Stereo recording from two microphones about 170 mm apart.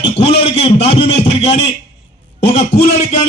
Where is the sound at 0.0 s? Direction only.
35° left (ahead or behind).